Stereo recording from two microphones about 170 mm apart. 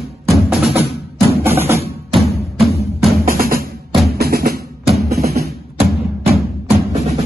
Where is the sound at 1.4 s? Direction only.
15° right (ahead or behind).